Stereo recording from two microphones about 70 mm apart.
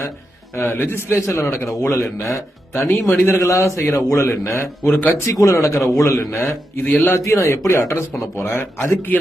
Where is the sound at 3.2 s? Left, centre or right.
Left.